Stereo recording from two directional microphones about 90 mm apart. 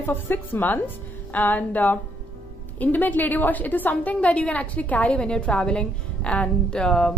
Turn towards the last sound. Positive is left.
turn(degrees=10)  # may be behind; listen again after turning